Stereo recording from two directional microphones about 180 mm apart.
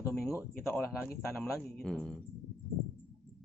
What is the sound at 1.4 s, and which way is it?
Speech, centre (ahead or behind).